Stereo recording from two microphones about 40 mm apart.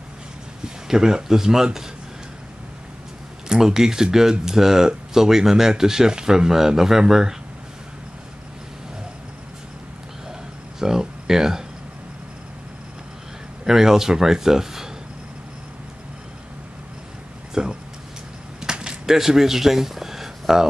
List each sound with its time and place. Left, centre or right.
0.8 s speech: centre
3.4 s speech: centre
10.8 s speech: centre
13.7 s speech: centre
17.6 s speech: centre
18.6 s a sound: centre
19.0 s speech: centre